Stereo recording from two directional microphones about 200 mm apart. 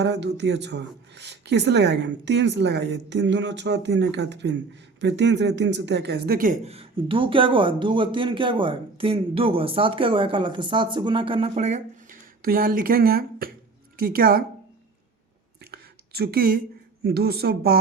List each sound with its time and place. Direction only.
0.0 s a woman's voice: 60° right (ahead or behind)
15.7 s a sound: 50° right (ahead or behind)
17.0 s a woman's voice: 50° right (ahead or behind)